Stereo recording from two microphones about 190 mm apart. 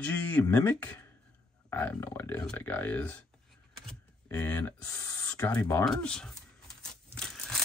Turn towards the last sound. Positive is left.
turn(degrees=5)  # may be behind; listen again after turning